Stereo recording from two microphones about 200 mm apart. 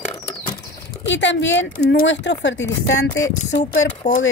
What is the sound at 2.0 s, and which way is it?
Speech, 65° left (ahead or behind).